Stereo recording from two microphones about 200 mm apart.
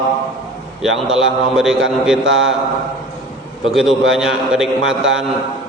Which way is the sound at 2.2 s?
75° right (ahead or behind).